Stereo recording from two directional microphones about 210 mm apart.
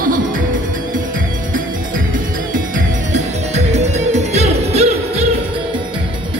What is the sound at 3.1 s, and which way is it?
Music, 35° right (ahead or behind).